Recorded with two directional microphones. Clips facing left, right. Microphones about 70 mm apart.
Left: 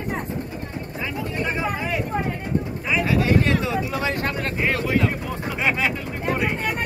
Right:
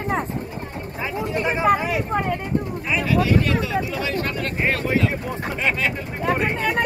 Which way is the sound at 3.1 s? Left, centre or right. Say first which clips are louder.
Right 1 dB; left.